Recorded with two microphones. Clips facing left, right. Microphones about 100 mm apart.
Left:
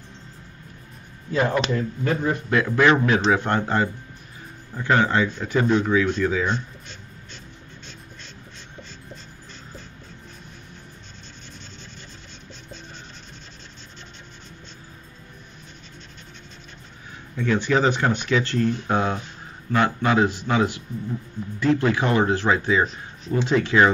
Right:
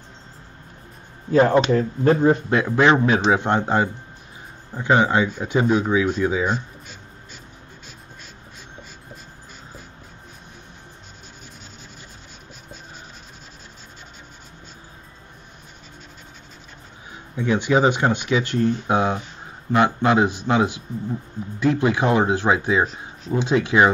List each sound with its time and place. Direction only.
1.3 s speech: 30° right (ahead or behind); by 6.5 s 15° right (ahead or behind)
17.4 s speech: 15° right (ahead or behind)
22.8 s speech: centre (ahead or behind)
23.4 s speech: 15° right (ahead or behind)